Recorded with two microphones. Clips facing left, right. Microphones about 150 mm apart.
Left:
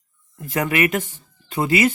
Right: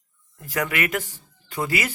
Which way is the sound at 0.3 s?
25° left (ahead or behind).